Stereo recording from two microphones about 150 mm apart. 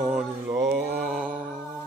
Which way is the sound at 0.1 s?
15° right (ahead or behind).